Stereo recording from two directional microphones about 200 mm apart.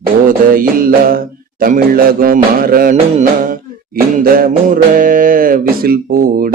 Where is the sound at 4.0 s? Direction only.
45° right (ahead or behind).